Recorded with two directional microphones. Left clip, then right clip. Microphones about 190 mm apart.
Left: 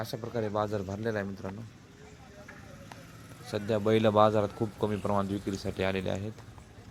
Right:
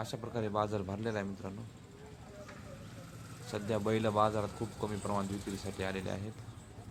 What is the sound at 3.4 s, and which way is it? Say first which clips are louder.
Speech: left 6 dB; 15° left (ahead or behind).